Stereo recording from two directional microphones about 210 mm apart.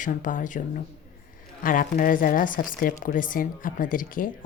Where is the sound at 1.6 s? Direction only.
40° left (ahead or behind).